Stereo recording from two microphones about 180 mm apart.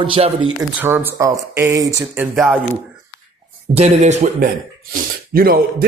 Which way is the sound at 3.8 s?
40° right (ahead or behind).